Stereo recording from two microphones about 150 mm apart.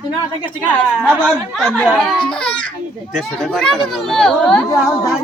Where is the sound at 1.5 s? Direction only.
5° left (ahead or behind).